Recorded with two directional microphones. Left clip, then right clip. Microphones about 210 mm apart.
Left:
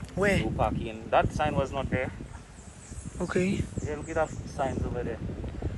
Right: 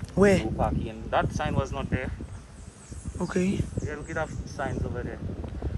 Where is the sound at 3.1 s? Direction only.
5° right (ahead or behind).